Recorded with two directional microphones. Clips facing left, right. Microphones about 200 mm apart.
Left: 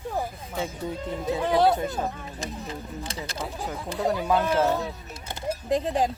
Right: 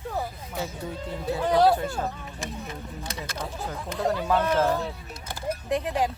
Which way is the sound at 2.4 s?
30° left (ahead or behind).